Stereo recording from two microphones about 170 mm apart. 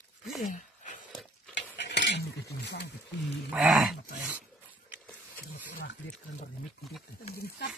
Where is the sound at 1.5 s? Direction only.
90° left.